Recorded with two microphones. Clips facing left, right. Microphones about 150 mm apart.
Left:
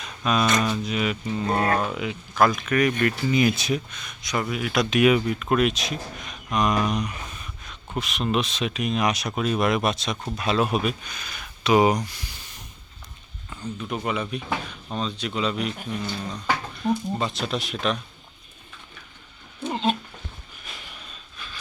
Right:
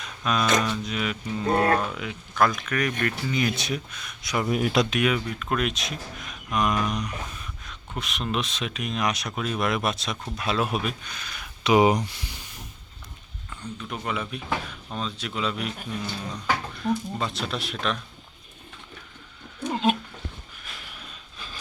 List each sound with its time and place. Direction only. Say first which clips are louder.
0.0 s a sound: left 3 dB; centre (ahead or behind)
0.6 s speech: left 3 dB; 5° left (ahead or behind)
4.4 s speech: right 4 dB; 40° right (ahead or behind)
5.0 s speech: left 6 dB; 10° left (ahead or behind)
11.6 s speech: even; 20° right (ahead or behind)
13.5 s speech: left 4 dB; 5° left (ahead or behind)
19.7 s cat: right 1 dB; 10° right (ahead or behind)
20.7 s a sound: left 2 dB; centre (ahead or behind)
21.3 s a sound: even; 35° right (ahead or behind)